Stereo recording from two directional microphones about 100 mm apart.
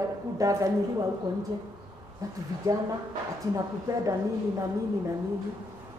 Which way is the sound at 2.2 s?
35° right (ahead or behind).